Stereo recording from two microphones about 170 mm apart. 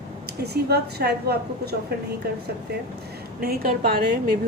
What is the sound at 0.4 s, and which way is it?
A woman's voice, 70° right (ahead or behind).